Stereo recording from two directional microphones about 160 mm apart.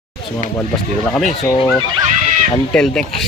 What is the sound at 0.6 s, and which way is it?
Speech, 5° left (ahead or behind).